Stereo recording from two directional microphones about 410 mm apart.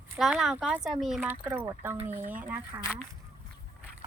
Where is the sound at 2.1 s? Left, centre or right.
Centre.